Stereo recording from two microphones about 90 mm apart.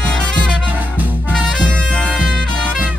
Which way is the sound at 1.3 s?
10° left (ahead or behind).